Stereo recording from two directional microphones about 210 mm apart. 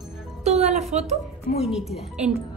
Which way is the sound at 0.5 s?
30° right (ahead or behind).